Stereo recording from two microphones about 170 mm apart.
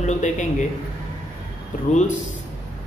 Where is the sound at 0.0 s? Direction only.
45° left (ahead or behind).